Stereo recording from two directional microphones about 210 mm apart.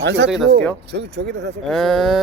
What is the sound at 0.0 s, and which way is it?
Speech, 55° right (ahead or behind).